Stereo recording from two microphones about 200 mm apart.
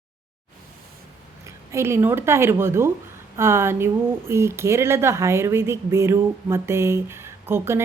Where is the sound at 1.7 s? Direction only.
15° right (ahead or behind).